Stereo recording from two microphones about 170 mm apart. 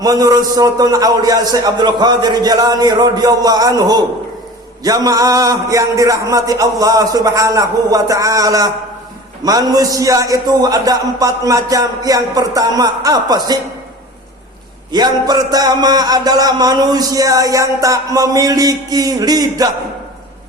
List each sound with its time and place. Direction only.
0.0 s a man's voice: 20° right (ahead or behind)
14.9 s a man's voice: 25° right (ahead or behind)